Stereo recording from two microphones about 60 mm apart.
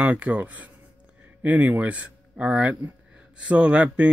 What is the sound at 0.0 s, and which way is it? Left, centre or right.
Speech, right.